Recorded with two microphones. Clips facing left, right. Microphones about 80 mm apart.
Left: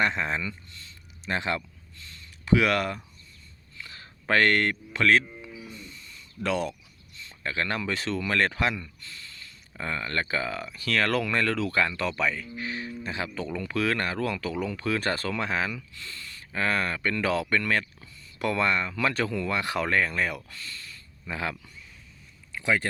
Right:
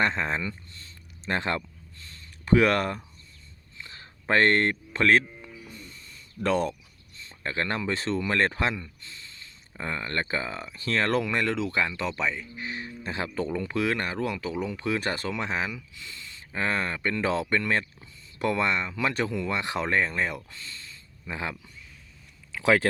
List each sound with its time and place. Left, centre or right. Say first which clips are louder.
0.0 s speech: even; right
3.8 s a sound: left 1 dB; right
5.4 s music: left 2 dB; right
7.2 s speech: even; right
22.6 s speech: right 4 dB; right